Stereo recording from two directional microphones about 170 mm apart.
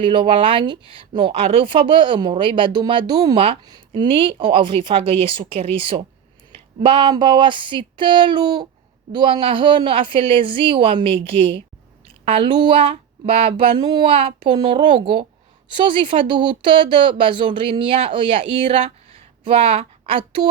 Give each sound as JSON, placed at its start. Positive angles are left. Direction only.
{"t": 0.0, "sound": "speech", "side_deg": -30}